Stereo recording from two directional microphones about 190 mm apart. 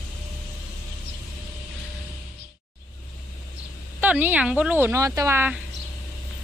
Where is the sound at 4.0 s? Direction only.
10° right (ahead or behind).